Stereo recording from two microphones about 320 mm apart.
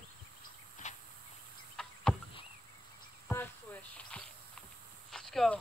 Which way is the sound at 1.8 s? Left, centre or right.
Centre.